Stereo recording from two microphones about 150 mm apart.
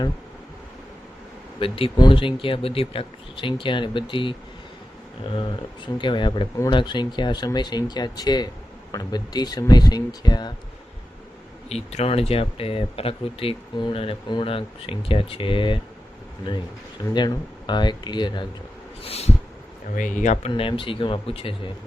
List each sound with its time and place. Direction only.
1.5 s speech: 35° left (ahead or behind)
11.7 s speech: 45° left (ahead or behind)
17.2 s speech: 30° left (ahead or behind)
19.0 s a sound: 40° left (ahead or behind)
20.0 s speech: 55° left (ahead or behind)
20.5 s speech: 35° left (ahead or behind)